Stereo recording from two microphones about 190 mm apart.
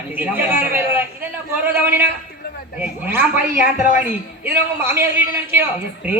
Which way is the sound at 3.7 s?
40° left (ahead or behind).